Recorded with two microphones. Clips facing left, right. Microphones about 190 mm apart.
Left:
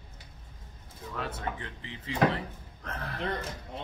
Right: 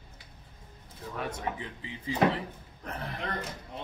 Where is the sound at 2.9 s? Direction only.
15° right (ahead or behind).